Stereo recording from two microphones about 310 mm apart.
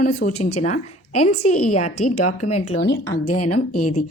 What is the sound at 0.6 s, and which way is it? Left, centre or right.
Speech, left.